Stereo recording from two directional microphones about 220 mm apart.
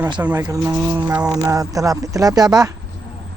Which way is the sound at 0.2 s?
5° right (ahead or behind).